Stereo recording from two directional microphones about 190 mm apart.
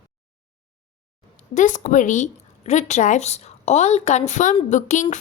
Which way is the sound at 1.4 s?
40° left (ahead or behind).